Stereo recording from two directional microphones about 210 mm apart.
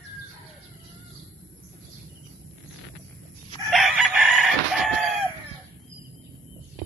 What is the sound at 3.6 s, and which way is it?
Chicken, centre (ahead or behind).